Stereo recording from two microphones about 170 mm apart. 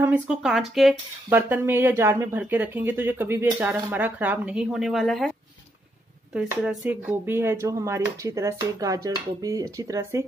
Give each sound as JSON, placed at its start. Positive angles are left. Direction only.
{"t": 0.0, "sound": "speech", "side_deg": -5}
{"t": 6.3, "sound": "speech", "side_deg": -5}